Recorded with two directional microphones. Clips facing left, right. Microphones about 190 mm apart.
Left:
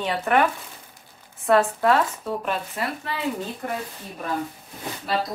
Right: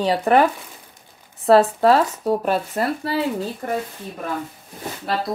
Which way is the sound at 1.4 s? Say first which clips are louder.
Right 5 dB; 35° right (ahead or behind).